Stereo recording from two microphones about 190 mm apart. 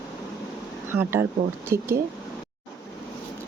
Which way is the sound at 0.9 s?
10° right (ahead or behind).